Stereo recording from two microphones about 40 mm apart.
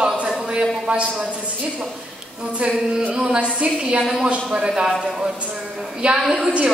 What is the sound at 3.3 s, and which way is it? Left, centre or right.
Speech, right.